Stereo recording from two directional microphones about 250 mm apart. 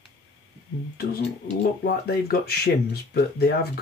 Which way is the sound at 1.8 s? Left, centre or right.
Left.